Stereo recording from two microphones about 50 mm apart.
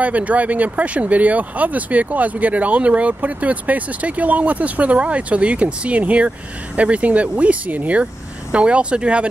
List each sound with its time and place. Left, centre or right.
0.0 s speech: right